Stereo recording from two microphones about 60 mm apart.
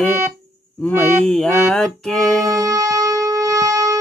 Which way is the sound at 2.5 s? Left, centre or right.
Right.